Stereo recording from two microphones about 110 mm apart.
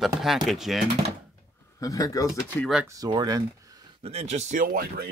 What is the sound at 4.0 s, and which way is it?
Speech, 75° right (ahead or behind).